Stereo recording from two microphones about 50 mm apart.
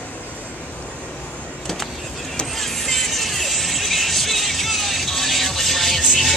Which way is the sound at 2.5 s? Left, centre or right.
Centre.